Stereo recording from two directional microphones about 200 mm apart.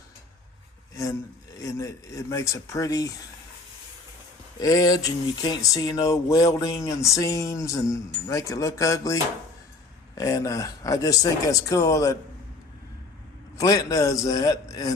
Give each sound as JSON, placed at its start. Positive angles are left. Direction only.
{"t": 1.5, "sound": "speech", "side_deg": 15}
{"t": 4.6, "sound": "speech", "side_deg": 20}
{"t": 10.2, "sound": "speech", "side_deg": 15}
{"t": 13.6, "sound": "speech", "side_deg": 15}